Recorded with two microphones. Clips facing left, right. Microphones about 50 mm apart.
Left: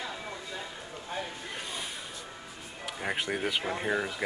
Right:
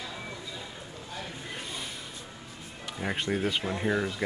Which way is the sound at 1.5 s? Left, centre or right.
Centre.